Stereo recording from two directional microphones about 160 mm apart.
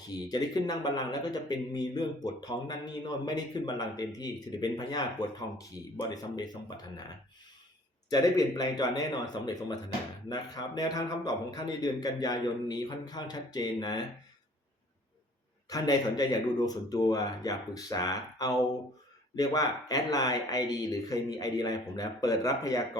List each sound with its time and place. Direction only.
0.1 s a man's voice: 25° left (ahead or behind)
8.1 s a man's voice: 25° left (ahead or behind)
15.7 s a man's voice: 25° left (ahead or behind)